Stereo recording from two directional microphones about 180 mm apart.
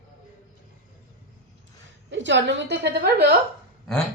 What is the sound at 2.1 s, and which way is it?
A woman's voice, 90° right.